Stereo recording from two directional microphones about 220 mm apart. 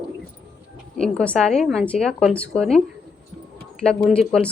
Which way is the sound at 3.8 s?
5° left (ahead or behind).